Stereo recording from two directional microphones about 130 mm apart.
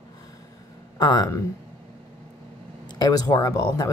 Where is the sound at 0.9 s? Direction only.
30° left (ahead or behind).